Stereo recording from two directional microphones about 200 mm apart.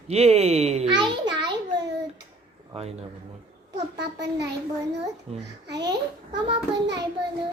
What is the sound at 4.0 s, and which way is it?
A child's voice, 60° right (ahead or behind).